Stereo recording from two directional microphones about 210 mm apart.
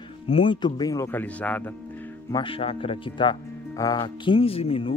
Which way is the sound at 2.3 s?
25° left (ahead or behind).